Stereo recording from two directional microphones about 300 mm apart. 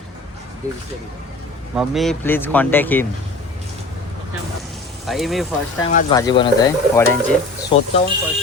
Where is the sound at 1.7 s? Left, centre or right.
Centre.